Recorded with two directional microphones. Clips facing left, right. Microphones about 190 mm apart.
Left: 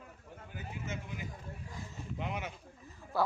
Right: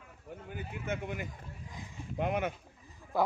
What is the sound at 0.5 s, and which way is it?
Speech, 60° right (ahead or behind).